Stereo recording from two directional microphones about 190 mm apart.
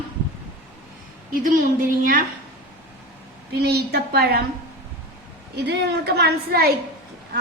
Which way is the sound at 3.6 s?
55° right (ahead or behind).